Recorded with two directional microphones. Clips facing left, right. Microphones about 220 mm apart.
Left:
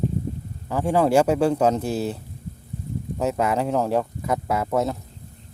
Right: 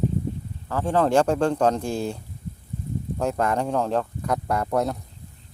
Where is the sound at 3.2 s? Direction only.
5° left (ahead or behind).